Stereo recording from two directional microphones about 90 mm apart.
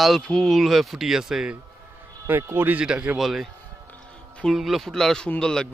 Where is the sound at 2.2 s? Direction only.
25° right (ahead or behind).